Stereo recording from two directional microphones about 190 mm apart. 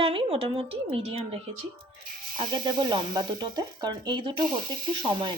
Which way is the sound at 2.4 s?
25° right (ahead or behind).